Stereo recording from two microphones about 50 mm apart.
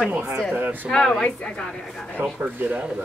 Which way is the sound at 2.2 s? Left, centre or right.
Right.